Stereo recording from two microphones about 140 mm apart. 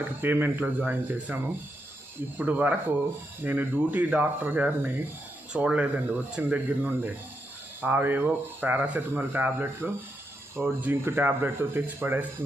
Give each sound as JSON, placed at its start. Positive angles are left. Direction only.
{"t": 0.0, "sound": "speech", "side_deg": -15}